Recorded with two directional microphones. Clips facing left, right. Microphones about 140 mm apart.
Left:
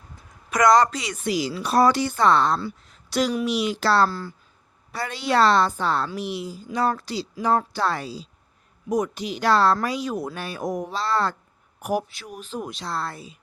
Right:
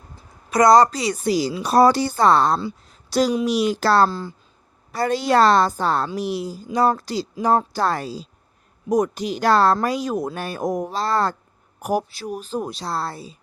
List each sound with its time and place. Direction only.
0.2 s speech: 35° right (ahead or behind)
2.9 s a sound: 35° right (ahead or behind)
3.4 s speech: 40° right (ahead or behind)
4.1 s speech: 20° right (ahead or behind)
4.9 s speech: 40° right (ahead or behind)